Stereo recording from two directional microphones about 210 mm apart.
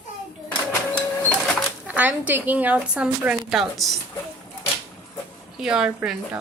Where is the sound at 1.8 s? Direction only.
5° right (ahead or behind).